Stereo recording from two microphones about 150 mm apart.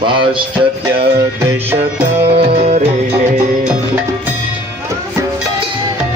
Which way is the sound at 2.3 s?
45° right (ahead or behind).